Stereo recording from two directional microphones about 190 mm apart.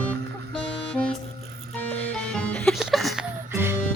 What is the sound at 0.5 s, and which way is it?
Music, 5° left (ahead or behind).